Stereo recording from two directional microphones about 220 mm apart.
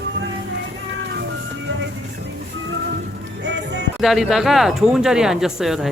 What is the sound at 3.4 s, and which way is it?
Music, 50° right (ahead or behind).